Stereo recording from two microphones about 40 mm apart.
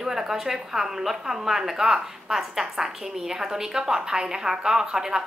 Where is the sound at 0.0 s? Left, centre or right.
Centre.